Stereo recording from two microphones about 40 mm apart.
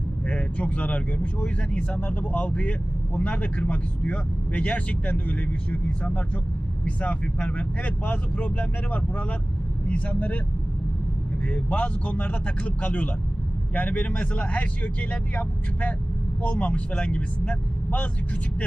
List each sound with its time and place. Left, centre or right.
0.3 s speech: left
11.4 s speech: left